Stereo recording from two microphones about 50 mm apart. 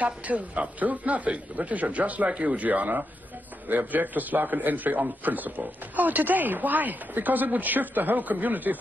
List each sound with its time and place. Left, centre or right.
0.0 s a man's voice: right